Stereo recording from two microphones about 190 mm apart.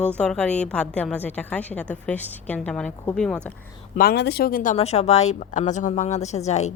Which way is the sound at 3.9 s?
55° left (ahead or behind).